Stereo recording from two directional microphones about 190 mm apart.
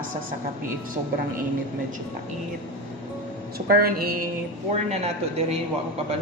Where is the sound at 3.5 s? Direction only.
50° right (ahead or behind).